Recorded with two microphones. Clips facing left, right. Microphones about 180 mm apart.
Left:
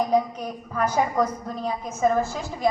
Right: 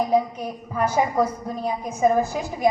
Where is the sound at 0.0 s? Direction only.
10° right (ahead or behind).